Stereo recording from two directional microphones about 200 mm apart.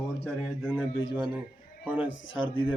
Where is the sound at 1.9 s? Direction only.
5° right (ahead or behind).